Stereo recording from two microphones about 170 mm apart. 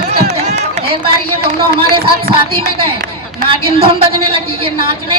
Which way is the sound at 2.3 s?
35° right (ahead or behind).